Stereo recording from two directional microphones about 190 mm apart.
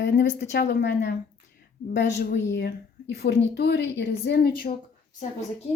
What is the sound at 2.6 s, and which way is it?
Speech, 55° left (ahead or behind).